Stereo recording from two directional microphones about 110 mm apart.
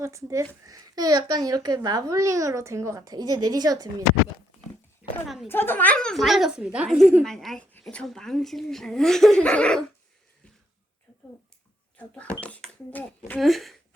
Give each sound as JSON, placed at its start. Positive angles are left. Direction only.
{"t": 0.0, "sound": "a child's voice", "side_deg": -25}
{"t": 5.0, "sound": "a sound", "side_deg": -15}
{"t": 5.5, "sound": "a woman's voice", "side_deg": 20}
{"t": 11.9, "sound": "speech", "side_deg": 15}
{"t": 13.4, "sound": "a woman's voice", "side_deg": 0}